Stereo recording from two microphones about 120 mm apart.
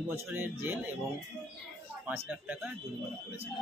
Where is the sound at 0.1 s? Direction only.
15° right (ahead or behind).